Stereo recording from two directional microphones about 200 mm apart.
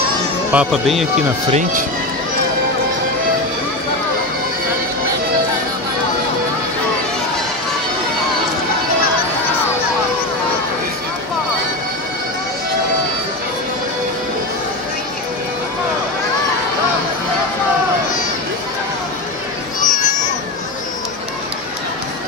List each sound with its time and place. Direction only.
0.5 s speech: 5° right (ahead or behind)
1.5 s speech: 40° right (ahead or behind)
19.8 s a sound: 40° left (ahead or behind)